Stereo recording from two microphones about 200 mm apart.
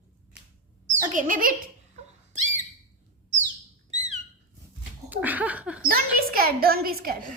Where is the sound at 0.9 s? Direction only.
40° right (ahead or behind).